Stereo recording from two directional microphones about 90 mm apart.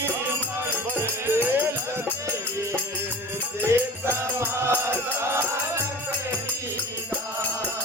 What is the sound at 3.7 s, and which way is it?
Music, 25° right (ahead or behind).